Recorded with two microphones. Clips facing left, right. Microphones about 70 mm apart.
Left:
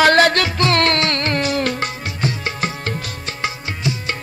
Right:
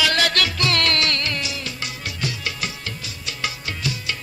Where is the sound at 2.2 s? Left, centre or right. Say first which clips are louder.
Left 6 dB; left.